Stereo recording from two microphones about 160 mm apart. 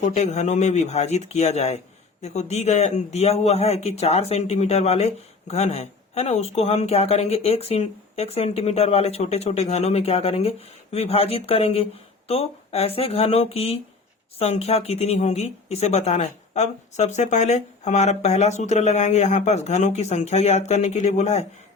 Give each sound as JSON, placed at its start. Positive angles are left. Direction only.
{"t": 0.0, "sound": "a woman's voice", "side_deg": 45}